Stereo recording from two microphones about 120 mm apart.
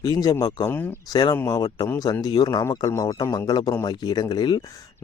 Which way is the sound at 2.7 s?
20° left (ahead or behind).